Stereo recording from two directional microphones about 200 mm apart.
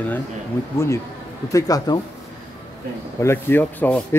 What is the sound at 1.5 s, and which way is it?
Speech, 15° left (ahead or behind).